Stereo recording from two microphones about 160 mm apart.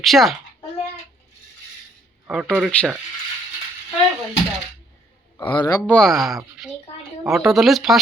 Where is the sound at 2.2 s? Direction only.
5° right (ahead or behind).